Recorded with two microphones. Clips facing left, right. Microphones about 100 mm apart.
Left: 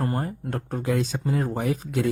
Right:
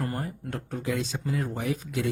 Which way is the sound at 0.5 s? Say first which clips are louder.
Left 5 dB; 45° left (ahead or behind).